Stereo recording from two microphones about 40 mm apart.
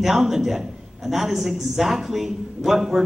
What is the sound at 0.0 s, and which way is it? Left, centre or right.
Speech, centre.